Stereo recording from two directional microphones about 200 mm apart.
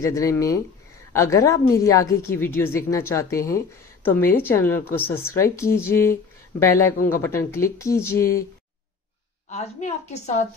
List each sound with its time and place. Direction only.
0.0 s a woman's voice: 15° left (ahead or behind)
9.5 s a woman's voice: 35° left (ahead or behind)